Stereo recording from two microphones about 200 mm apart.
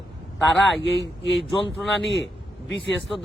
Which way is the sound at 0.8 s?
65° left (ahead or behind).